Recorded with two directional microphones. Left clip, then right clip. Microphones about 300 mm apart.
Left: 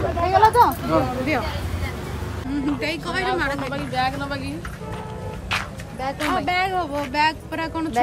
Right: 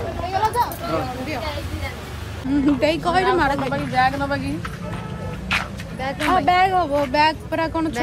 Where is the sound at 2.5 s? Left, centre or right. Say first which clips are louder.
Right 7 dB; centre.